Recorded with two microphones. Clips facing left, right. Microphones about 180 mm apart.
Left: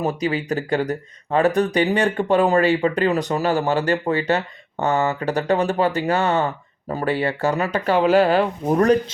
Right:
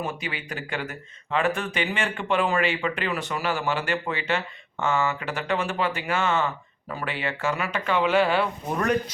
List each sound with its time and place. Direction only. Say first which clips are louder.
0.0 s speech: left 10 dB; 40° left (ahead or behind)